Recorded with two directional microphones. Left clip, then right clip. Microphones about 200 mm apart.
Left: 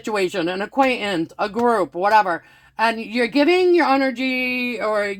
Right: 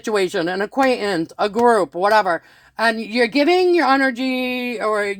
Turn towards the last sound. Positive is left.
turn(degrees=-45)  # may be behind; listen again after turning